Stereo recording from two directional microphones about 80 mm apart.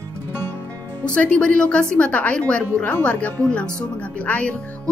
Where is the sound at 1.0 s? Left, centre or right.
Centre.